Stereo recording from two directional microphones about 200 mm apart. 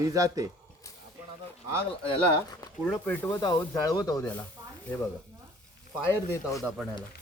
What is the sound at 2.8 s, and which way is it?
Speech, 5° left (ahead or behind).